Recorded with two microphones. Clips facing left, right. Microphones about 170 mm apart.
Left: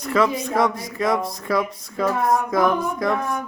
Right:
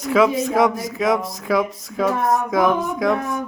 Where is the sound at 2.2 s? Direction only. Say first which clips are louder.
Left 2 dB; 20° right (ahead or behind).